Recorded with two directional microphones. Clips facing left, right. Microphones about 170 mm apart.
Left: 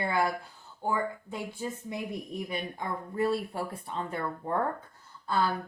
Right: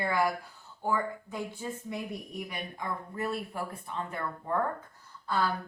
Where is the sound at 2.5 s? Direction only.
30° left (ahead or behind).